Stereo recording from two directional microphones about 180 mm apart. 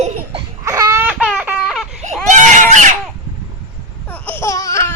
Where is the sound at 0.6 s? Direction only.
15° right (ahead or behind).